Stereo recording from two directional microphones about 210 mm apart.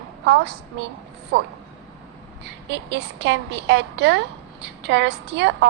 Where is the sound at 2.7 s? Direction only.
55° right (ahead or behind).